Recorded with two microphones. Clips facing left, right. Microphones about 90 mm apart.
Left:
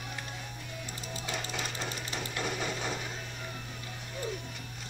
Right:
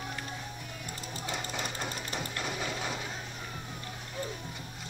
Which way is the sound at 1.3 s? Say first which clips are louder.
Right 1 dB; 10° right (ahead or behind).